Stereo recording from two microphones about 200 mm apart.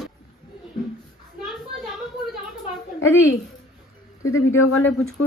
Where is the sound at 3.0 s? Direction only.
15° left (ahead or behind).